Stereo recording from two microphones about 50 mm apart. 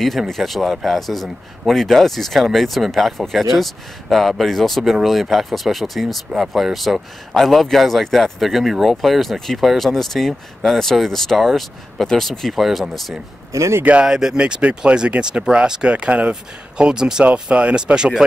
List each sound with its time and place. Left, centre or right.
0.3 s speech: centre
13.5 s speech: right
14.0 s speech: centre
17.2 s speech: right